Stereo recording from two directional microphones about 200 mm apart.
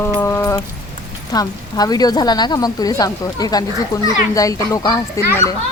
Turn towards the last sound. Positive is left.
turn(degrees=15)  # may be behind; listen again after turning